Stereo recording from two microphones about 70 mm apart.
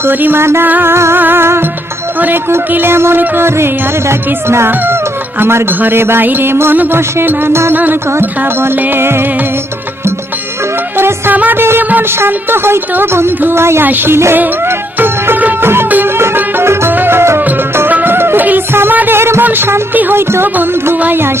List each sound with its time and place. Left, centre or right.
0.0 s speech: right
10.9 s music: right
11.9 s speech: right
14.3 s music: right
19.5 s speech: right